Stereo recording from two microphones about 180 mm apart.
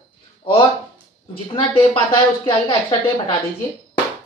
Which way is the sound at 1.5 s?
30° left (ahead or behind).